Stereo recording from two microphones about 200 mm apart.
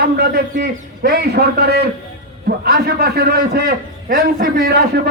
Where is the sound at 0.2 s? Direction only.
50° right (ahead or behind).